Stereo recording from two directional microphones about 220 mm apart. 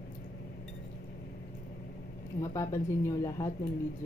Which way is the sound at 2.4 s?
15° left (ahead or behind).